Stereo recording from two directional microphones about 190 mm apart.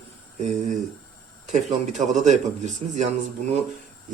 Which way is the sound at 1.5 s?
40° right (ahead or behind).